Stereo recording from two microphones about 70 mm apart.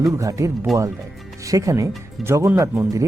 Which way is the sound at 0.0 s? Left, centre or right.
Right.